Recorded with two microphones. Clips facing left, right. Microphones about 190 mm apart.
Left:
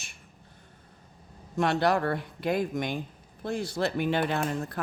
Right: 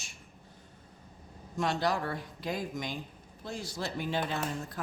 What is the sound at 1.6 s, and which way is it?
Speech, 60° left (ahead or behind).